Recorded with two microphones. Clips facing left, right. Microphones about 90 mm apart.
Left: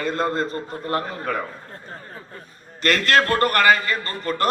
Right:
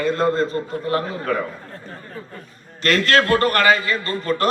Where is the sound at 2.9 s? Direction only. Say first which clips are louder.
Right 1 dB; 5° left (ahead or behind).